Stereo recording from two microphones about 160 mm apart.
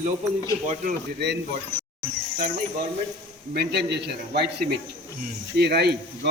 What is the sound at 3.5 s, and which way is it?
A man's voice, 90° right.